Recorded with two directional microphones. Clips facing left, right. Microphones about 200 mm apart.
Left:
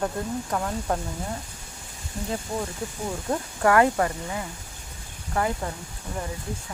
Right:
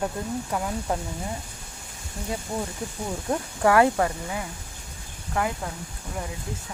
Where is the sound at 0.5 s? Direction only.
5° right (ahead or behind).